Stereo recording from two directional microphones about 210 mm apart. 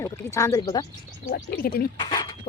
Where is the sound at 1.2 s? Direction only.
45° left (ahead or behind).